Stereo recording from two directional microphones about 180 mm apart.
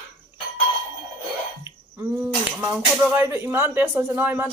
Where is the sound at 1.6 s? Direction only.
10° right (ahead or behind).